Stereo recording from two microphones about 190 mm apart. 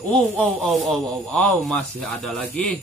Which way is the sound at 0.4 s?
Centre (ahead or behind).